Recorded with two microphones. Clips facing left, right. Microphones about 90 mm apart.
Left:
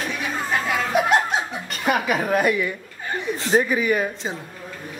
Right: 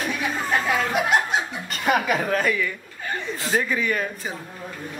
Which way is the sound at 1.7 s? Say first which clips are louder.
Even; centre (ahead or behind).